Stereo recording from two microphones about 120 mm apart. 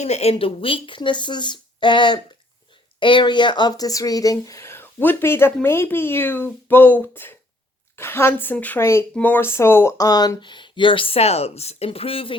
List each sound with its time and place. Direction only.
0.0 s a woman's voice: 65° left (ahead or behind); by 9.9 s 20° left (ahead or behind)
10.0 s speech: 35° left (ahead or behind); by 12.4 s 50° left (ahead or behind)